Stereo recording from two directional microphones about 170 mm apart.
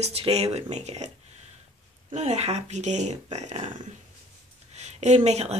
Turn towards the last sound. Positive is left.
turn(degrees=-40)  # may be behind; listen again after turning